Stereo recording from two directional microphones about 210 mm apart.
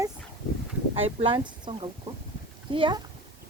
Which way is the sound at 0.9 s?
25° right (ahead or behind).